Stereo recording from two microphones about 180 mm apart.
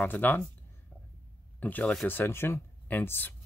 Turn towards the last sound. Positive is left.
turn(degrees=10)  # may be behind; listen again after turning